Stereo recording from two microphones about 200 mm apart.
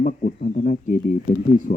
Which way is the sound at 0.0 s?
40° left (ahead or behind).